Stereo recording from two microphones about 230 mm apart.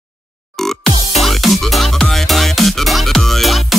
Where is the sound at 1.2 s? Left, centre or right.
Centre.